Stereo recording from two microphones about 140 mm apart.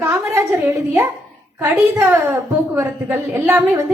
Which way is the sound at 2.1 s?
20° right (ahead or behind).